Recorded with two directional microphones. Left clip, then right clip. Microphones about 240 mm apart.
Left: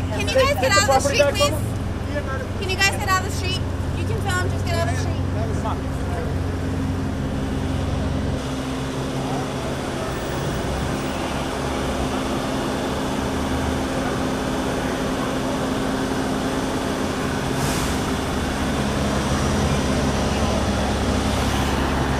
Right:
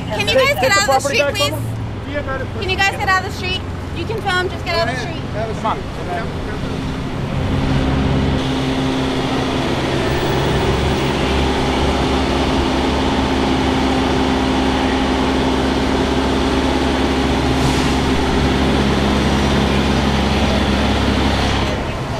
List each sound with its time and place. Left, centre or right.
0.2 s speech: centre
2.7 s speech: left
4.3 s speech: left